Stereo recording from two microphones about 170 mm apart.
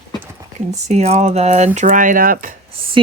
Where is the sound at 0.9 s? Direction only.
40° right (ahead or behind).